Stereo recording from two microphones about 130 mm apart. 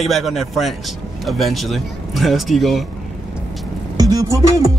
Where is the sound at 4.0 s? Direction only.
30° right (ahead or behind).